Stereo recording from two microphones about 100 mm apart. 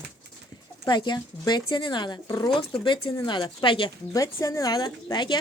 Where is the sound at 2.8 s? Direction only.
55° left (ahead or behind).